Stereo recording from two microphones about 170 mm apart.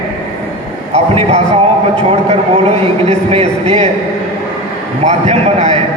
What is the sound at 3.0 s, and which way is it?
Speech, 35° right (ahead or behind).